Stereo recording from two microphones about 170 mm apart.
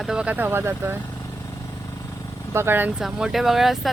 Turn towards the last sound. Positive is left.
turn(degrees=0)  # may be behind; listen again after turning